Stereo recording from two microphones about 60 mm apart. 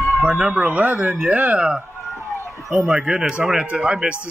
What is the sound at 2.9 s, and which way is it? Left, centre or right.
Speech, centre.